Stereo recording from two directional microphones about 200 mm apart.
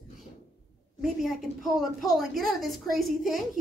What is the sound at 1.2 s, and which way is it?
A woman's voice, centre (ahead or behind).